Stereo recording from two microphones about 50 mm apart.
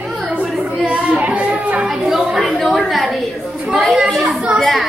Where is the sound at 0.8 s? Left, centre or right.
Right.